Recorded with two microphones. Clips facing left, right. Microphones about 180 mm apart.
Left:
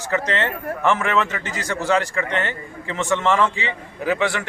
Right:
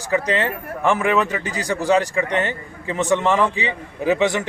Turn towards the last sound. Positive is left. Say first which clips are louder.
# right 3 dB
turn(degrees=-20)  # may be behind; listen again after turning